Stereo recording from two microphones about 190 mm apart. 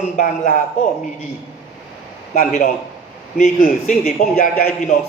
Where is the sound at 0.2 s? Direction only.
40° left (ahead or behind).